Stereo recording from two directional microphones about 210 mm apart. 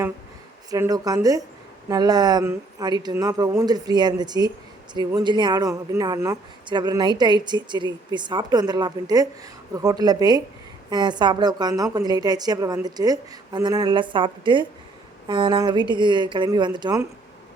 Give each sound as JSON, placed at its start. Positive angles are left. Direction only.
{"t": 0.7, "sound": "speech", "side_deg": -15}